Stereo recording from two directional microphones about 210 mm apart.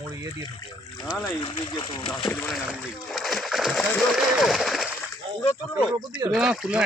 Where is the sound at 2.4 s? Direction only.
Centre (ahead or behind).